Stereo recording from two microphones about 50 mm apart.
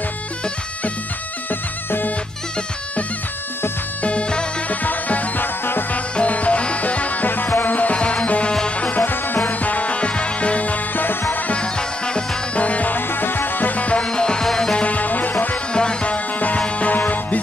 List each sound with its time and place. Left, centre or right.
1.5 s music: left
4.0 s music: left
4.6 s music: left
9.0 s music: left
11.1 s music: left
11.5 s music: centre
14.8 s music: left
15.7 s music: centre; by 17.4 s left